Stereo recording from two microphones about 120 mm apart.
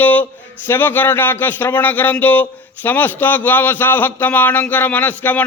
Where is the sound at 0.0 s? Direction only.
15° left (ahead or behind).